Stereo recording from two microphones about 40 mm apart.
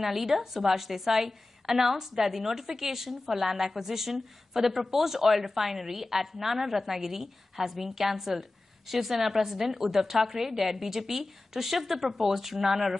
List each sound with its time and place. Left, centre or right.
0.0 s a woman's voice: centre